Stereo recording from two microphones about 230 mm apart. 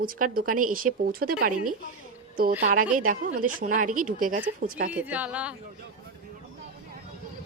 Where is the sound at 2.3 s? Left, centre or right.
Right.